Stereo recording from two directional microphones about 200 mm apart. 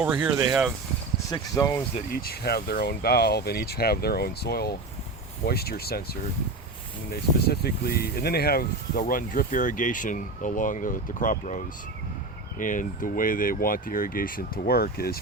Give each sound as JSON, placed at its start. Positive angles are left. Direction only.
{"t": 0.0, "sound": "speech", "side_deg": -5}
{"t": 1.3, "sound": "speech", "side_deg": 15}
{"t": 2.0, "sound": "speech", "side_deg": 50}
{"t": 7.1, "sound": "speech", "side_deg": 50}